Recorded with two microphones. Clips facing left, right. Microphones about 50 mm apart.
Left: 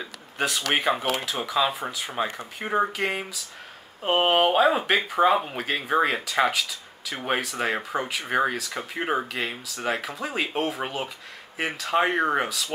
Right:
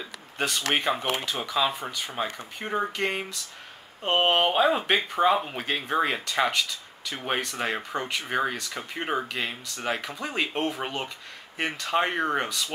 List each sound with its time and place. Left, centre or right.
0.4 s speech: centre